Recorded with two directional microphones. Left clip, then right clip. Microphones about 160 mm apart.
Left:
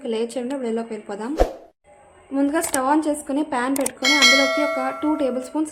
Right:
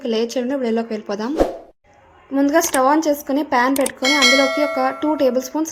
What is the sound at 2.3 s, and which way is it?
Speech, 30° right (ahead or behind).